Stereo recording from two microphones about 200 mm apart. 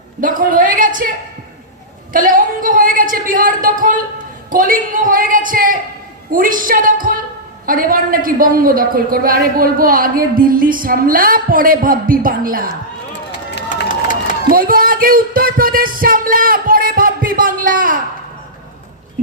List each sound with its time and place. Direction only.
0.2 s a woman's voice: 45° right (ahead or behind)
2.1 s a sound: 45° right (ahead or behind)
4.5 s a woman's voice: 45° right (ahead or behind)
13.7 s run: 40° left (ahead or behind)
14.5 s music: 45° right (ahead or behind)